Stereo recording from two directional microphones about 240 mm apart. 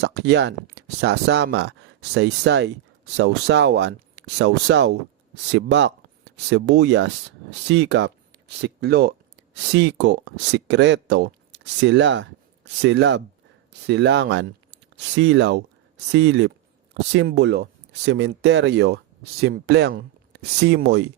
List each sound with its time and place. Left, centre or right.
0.0 s speech: right